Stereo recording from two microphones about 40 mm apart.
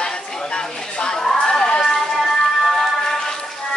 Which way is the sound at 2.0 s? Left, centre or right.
Centre.